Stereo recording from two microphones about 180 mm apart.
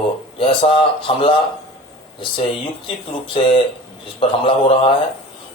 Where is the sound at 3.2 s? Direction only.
30° left (ahead or behind).